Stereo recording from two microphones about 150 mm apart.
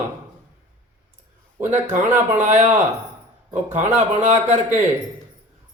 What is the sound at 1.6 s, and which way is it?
A man's voice, 55° right (ahead or behind).